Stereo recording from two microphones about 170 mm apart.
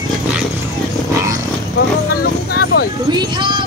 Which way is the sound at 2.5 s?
65° left (ahead or behind).